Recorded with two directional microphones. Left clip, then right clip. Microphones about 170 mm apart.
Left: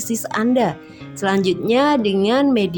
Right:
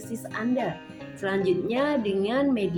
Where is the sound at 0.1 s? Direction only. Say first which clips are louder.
Left 10 dB; 60° left (ahead or behind).